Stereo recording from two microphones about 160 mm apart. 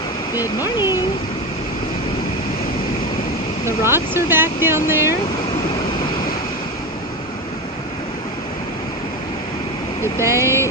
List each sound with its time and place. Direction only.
3.8 s speech: 15° right (ahead or behind)
10.1 s speech: 15° right (ahead or behind)